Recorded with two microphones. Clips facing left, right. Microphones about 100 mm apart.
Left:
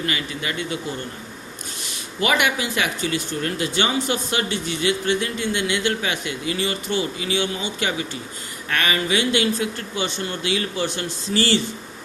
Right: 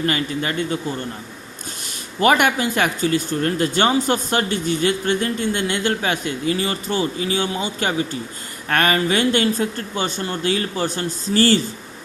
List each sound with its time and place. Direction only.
0.0 s speech: 40° right (ahead or behind)
2.2 s speech: 45° right (ahead or behind)